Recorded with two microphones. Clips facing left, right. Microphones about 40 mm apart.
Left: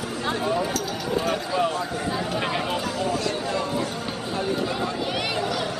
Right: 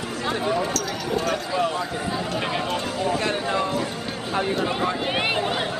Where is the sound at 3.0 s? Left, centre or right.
Right.